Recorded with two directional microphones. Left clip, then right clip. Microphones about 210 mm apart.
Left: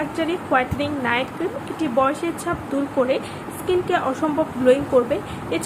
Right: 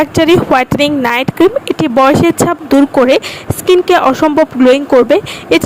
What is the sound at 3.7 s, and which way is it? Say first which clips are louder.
A woman's voice: right 13 dB; 50° right (ahead or behind).